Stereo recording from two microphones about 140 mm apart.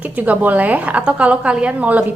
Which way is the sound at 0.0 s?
10° right (ahead or behind).